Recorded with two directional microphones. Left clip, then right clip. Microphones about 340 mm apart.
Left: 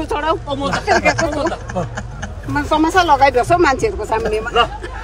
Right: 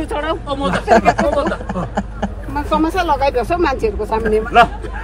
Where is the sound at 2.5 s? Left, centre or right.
Left.